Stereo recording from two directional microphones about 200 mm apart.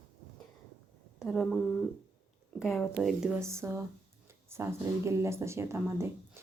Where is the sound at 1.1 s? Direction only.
Centre (ahead or behind).